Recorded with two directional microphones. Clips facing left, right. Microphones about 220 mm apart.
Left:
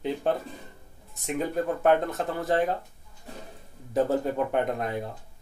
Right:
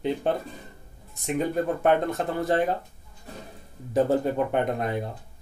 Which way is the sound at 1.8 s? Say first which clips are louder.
Left 1 dB; centre (ahead or behind).